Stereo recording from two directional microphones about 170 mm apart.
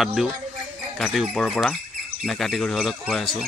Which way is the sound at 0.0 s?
Centre (ahead or behind).